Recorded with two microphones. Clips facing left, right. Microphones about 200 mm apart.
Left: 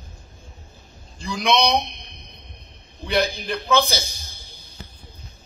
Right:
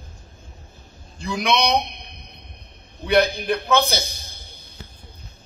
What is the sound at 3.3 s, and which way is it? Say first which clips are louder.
A man's voice: right 1 dB; 60° right (ahead or behind).